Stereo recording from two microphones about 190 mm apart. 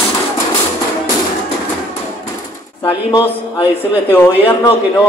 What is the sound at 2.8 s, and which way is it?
Speech, 25° left (ahead or behind).